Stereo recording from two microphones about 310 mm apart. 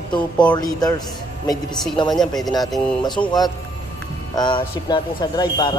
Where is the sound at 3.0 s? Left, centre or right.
Centre.